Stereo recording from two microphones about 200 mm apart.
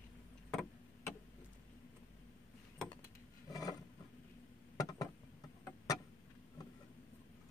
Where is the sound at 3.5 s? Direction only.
20° left (ahead or behind).